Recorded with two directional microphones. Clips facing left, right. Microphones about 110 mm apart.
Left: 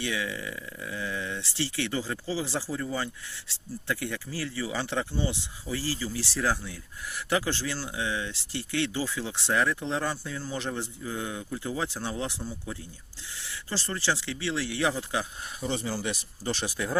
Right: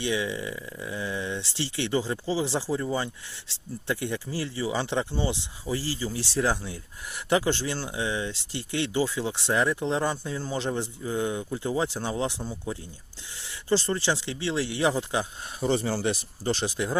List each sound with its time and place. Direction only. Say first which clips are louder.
0.0 s speech: right 4 dB; 20° right (ahead or behind)
15.6 s speech: right 6 dB; 40° right (ahead or behind)
16.4 s speech: right 3 dB; 30° right (ahead or behind)